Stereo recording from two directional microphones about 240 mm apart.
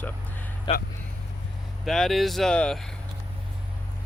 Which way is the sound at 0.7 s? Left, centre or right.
Left.